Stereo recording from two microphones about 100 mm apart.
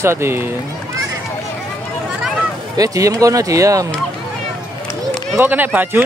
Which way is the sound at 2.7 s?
35° right (ahead or behind).